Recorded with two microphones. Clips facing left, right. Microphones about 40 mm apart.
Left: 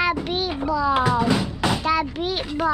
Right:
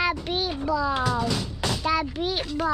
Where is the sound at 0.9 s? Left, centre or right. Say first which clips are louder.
Left 6 dB; centre.